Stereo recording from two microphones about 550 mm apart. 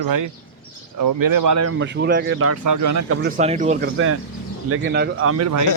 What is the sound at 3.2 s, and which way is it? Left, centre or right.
Speech, centre.